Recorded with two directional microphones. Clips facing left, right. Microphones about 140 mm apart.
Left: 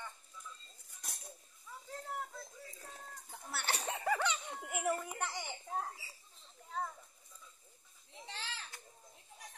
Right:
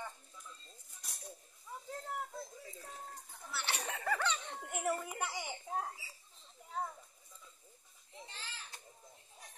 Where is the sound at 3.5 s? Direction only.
50° left (ahead or behind).